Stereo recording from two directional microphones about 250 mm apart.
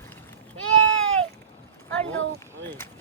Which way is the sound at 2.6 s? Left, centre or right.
Centre.